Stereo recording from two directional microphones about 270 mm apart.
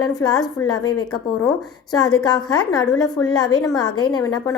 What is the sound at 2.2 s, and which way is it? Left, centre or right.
A woman's voice, centre.